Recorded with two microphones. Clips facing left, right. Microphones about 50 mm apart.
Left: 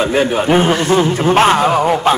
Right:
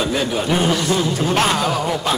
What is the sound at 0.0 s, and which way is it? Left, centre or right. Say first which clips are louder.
A man's voice: left 6 dB; left.